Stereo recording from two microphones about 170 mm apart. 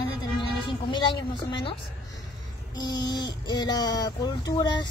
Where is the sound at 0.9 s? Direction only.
30° left (ahead or behind).